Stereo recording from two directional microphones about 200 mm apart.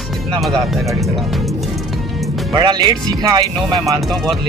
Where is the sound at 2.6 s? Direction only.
20° right (ahead or behind).